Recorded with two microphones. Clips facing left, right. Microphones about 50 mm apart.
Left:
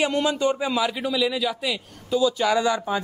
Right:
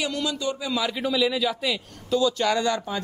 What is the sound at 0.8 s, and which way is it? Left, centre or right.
A man's voice, centre.